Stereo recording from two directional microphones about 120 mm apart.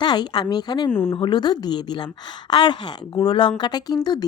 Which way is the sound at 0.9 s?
20° left (ahead or behind).